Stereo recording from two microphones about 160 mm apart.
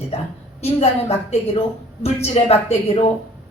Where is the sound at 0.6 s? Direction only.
40° left (ahead or behind).